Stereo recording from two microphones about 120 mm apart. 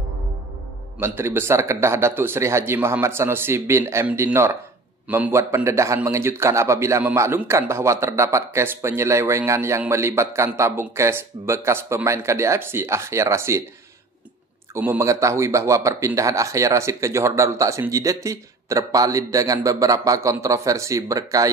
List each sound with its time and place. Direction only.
0.9 s a man's voice: 20° right (ahead or behind)
5.0 s a man's voice: 10° right (ahead or behind)
5.3 s a man's voice: 20° right (ahead or behind)
14.7 s a man's voice: 20° right (ahead or behind)